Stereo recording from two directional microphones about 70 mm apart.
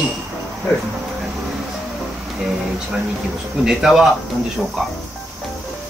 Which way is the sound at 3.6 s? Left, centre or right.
Centre.